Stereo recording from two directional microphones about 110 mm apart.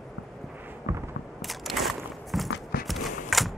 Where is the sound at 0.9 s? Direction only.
25° right (ahead or behind).